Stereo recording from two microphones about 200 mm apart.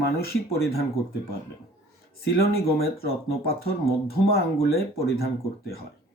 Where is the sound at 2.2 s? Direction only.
50° left (ahead or behind).